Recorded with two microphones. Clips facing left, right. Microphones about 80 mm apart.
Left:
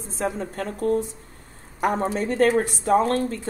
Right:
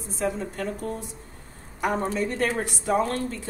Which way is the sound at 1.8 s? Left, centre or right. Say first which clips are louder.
Left 3 dB; left.